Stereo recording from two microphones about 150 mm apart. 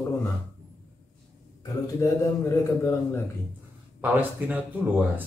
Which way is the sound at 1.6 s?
25° left (ahead or behind).